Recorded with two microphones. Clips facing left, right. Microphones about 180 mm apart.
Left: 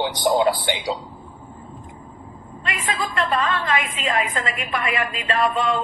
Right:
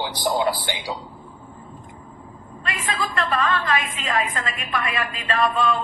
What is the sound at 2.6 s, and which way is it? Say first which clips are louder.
A woman's voice: left 1 dB; 20° left (ahead or behind).